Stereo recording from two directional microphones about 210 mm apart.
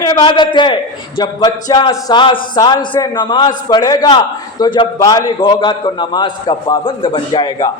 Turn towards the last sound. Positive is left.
turn(degrees=20)  # may be behind; listen again after turning